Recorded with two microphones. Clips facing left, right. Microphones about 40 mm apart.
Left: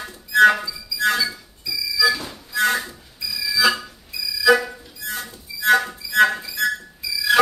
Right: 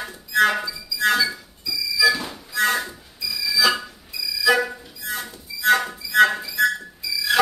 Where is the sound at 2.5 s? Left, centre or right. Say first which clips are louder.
Left 1 dB; centre.